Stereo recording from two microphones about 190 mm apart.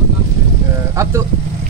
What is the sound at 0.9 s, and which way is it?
Speech, 15° right (ahead or behind).